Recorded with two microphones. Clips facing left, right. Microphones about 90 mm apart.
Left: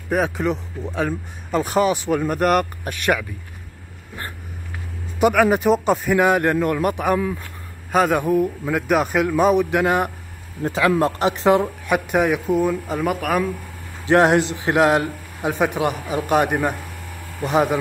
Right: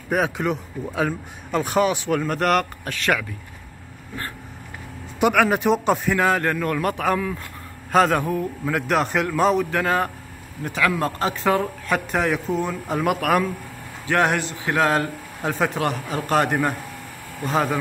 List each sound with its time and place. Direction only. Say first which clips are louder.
0.1 s speech: left 1 dB; centre (ahead or behind)
5.2 s speech: left 2 dB; centre (ahead or behind)
6.1 s a man's voice: left 4 dB; 15° left (ahead or behind)
8.7 s a man's voice: left 2 dB; 5° left (ahead or behind)
10.6 s a man's voice: left 4 dB; 25° left (ahead or behind); by 13.5 s centre (ahead or behind)
14.0 s a man's voice: left 6 dB; 25° left (ahead or behind)